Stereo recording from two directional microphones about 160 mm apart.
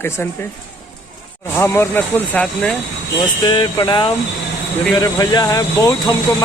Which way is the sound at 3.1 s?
30° left (ahead or behind).